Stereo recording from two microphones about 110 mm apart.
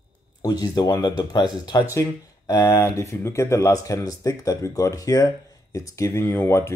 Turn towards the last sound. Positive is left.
turn(degrees=25)  # may be behind; listen again after turning